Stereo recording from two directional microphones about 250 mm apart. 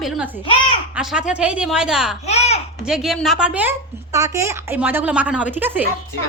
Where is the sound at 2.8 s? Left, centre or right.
Centre.